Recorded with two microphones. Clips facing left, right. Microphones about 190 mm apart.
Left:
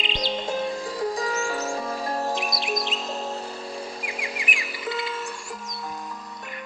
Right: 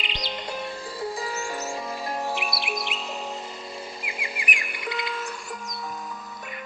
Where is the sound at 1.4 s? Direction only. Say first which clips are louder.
Left 4 dB; 10° left (ahead or behind).